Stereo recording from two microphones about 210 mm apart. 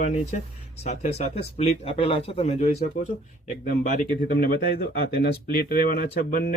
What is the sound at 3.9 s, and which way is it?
Speech, 45° left (ahead or behind).